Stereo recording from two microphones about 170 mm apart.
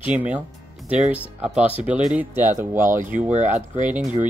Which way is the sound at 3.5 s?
45° right (ahead or behind).